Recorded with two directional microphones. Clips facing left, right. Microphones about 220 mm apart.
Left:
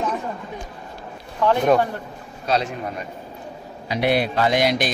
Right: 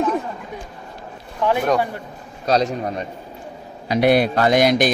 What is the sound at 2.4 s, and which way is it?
A man's voice, 40° right (ahead or behind).